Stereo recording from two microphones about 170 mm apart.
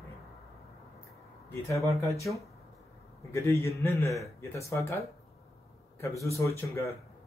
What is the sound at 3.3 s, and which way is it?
Speech, 15° left (ahead or behind).